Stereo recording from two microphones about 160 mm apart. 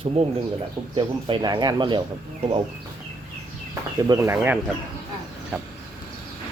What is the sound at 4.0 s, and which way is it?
Speech, 20° right (ahead or behind).